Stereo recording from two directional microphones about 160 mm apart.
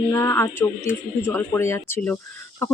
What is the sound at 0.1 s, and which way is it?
Speech, 15° left (ahead or behind).